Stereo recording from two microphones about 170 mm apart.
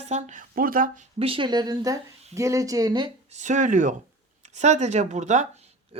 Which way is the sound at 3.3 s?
45° right (ahead or behind).